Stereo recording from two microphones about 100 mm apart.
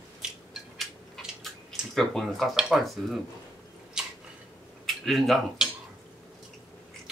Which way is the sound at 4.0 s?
5° right (ahead or behind).